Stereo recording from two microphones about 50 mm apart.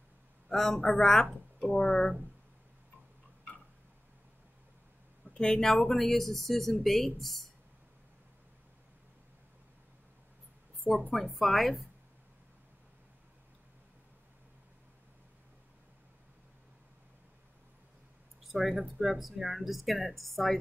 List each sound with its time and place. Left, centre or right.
0.5 s a man's voice: centre
0.7 s a woman's voice: left
1.0 s speech: centre
5.2 s speech: centre
11.3 s speech: centre
18.5 s speech: centre